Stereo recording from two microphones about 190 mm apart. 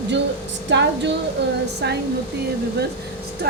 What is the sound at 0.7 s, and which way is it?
A woman's voice, 65° right (ahead or behind).